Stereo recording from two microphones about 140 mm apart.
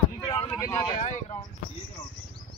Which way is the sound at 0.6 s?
20° left (ahead or behind).